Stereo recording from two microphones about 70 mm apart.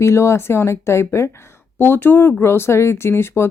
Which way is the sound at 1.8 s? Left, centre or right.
Left.